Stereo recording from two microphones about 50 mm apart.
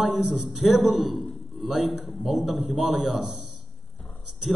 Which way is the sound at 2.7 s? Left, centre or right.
Centre.